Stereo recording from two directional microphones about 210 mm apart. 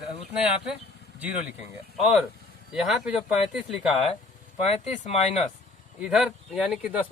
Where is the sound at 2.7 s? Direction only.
Centre (ahead or behind).